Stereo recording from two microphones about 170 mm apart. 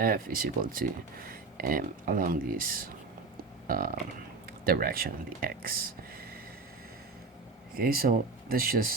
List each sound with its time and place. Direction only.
0.0 s speech: 55° right (ahead or behind)
7.8 s speech: 60° right (ahead or behind)